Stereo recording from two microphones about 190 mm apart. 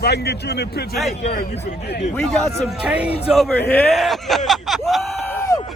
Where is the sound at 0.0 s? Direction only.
60° left (ahead or behind).